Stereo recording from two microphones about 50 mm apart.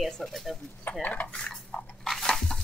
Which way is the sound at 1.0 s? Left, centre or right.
Left.